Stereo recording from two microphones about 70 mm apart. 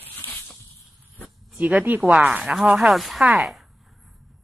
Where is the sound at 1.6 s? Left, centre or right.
Right.